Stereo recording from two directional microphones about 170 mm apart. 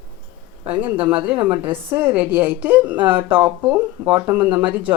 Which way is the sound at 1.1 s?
10° right (ahead or behind).